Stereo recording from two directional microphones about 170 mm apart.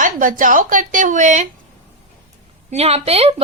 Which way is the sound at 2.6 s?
40° right (ahead or behind).